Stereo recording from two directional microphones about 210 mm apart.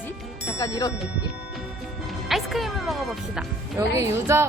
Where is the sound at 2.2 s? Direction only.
Centre (ahead or behind).